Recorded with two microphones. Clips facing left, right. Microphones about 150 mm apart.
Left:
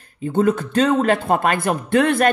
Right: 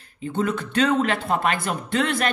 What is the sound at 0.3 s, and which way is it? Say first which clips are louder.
Speech: left 7 dB; 45° left (ahead or behind).